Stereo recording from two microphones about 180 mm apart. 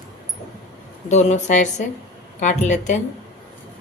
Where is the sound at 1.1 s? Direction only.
40° left (ahead or behind).